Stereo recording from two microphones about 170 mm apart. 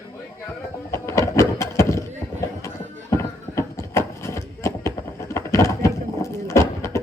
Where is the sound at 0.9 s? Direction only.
15° left (ahead or behind).